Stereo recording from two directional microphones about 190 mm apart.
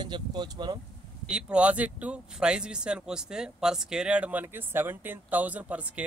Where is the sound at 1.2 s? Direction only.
5° right (ahead or behind).